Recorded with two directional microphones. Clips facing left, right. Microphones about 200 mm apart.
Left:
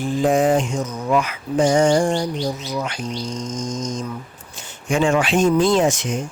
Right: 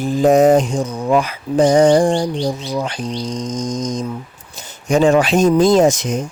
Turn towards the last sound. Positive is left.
turn(degrees=-40)  # may be behind; listen again after turning